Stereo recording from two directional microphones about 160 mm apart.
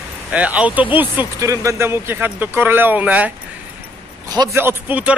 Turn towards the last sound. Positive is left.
turn(degrees=-10)  # may be behind; listen again after turning